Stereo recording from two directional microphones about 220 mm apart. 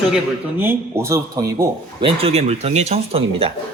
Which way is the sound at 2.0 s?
25° right (ahead or behind).